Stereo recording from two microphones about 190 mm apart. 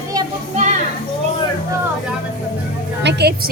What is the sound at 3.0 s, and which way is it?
Speech, 60° right (ahead or behind).